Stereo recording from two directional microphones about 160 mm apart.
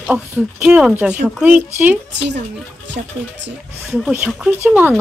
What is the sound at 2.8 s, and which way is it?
Speech, 90° right.